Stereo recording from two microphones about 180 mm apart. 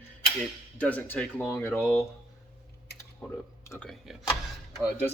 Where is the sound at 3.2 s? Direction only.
10° left (ahead or behind).